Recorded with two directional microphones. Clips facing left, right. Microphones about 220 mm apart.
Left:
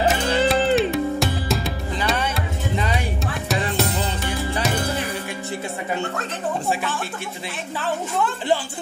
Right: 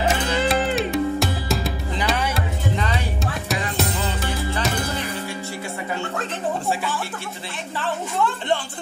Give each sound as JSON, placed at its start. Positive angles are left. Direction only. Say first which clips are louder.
{"t": 0.1, "sound": "music", "louder": "left 2 dB", "side_deg": 0}
{"t": 3.4, "sound": "music", "louder": "left 3 dB", "side_deg": 0}
{"t": 7.8, "sound": "a sound", "louder": "even", "side_deg": 0}